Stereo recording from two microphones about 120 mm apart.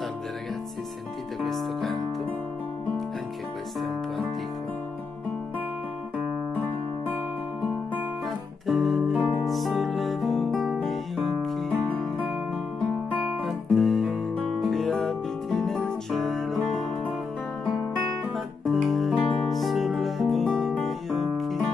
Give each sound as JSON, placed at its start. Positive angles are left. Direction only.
{"t": 1.4, "sound": "music", "side_deg": 0}
{"t": 8.6, "sound": "music", "side_deg": 0}
{"t": 13.4, "sound": "music", "side_deg": 0}
{"t": 18.3, "sound": "music", "side_deg": 0}